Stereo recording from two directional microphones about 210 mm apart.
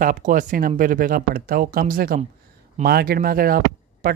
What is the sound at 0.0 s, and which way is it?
Speech, 40° right (ahead or behind).